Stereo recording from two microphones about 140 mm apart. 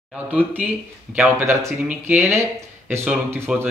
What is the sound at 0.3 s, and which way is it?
Speech, 10° right (ahead or behind).